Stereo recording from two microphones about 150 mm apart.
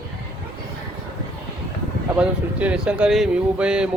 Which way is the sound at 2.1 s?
10° right (ahead or behind).